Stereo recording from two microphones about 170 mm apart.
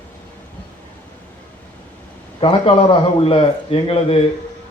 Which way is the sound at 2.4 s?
30° left (ahead or behind).